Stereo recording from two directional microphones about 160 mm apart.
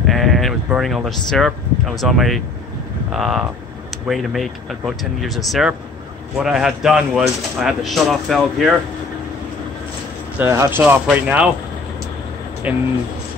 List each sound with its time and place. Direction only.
0.0 s speech: centre (ahead or behind)
10.4 s speech: 15° right (ahead or behind)
12.7 s speech: 10° right (ahead or behind)